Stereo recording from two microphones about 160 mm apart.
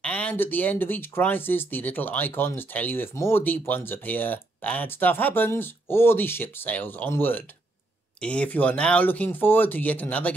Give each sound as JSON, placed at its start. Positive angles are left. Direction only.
{"t": 0.0, "sound": "speech", "side_deg": 10}